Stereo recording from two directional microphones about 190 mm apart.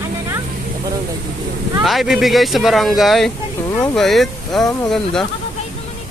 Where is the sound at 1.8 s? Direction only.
Centre (ahead or behind).